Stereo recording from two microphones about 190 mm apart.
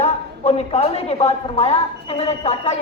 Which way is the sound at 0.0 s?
35° left (ahead or behind).